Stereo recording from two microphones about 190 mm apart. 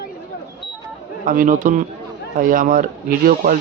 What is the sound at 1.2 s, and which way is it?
Speech, 45° right (ahead or behind).